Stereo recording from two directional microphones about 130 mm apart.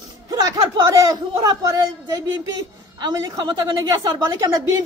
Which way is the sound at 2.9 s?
30° right (ahead or behind).